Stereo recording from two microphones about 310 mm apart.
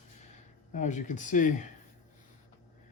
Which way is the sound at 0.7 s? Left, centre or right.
Left.